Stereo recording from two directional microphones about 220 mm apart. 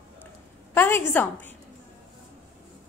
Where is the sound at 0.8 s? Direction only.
10° left (ahead or behind).